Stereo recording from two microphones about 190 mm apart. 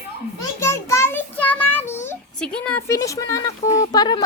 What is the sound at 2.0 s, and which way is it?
A woman's voice, 5° left (ahead or behind).